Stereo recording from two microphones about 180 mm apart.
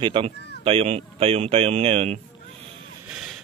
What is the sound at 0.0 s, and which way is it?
Speech, 30° right (ahead or behind).